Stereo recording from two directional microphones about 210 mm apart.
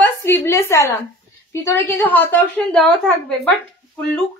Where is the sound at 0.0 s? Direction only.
10° left (ahead or behind).